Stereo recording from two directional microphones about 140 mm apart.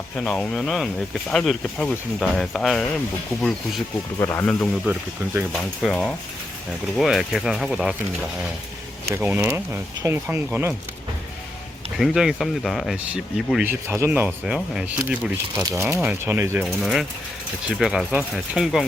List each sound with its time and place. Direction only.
0.2 s speech: 5° left (ahead or behind)
4.2 s speech: 20° left (ahead or behind)
4.9 s speech: 15° right (ahead or behind)
5.5 s speech: 5° left (ahead or behind)
9.0 s speech: 15° right (ahead or behind)
11.9 s speech: centre (ahead or behind)
13.7 s speech: 15° right (ahead or behind)
14.3 s speech: 5° right (ahead or behind)
15.6 s speech: 20° right (ahead or behind)
16.6 s speech: centre (ahead or behind)